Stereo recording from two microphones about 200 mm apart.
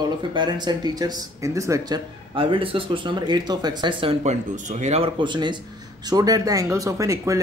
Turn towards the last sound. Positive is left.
turn(degrees=-15)  # may be behind; listen again after turning